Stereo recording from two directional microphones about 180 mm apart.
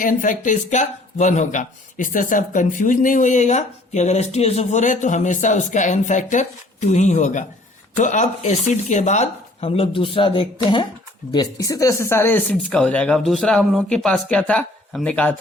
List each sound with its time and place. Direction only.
0.0 s speech: 45° left (ahead or behind); by 15.4 s 5° left (ahead or behind)